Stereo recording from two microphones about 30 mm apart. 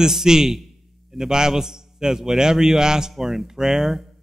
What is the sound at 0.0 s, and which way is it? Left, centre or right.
Speech, centre.